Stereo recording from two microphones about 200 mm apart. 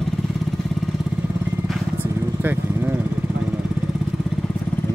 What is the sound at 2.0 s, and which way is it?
Vehicle, 10° right (ahead or behind).